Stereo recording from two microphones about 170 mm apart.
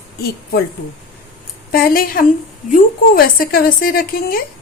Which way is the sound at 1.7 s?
60° left (ahead or behind).